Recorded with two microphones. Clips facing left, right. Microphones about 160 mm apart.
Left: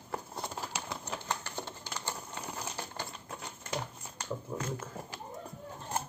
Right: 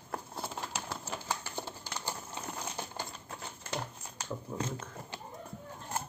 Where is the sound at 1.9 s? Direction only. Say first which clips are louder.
Even; 10° right (ahead or behind).